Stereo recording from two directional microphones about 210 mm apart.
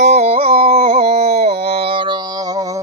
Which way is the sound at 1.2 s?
50° right (ahead or behind).